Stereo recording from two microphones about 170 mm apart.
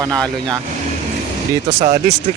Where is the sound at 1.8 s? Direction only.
45° right (ahead or behind).